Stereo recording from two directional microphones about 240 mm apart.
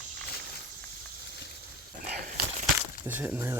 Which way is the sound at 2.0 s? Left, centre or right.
Right.